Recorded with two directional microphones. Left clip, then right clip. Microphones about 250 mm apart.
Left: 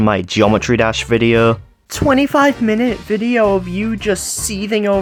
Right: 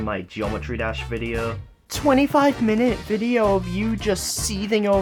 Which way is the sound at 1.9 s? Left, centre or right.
Centre.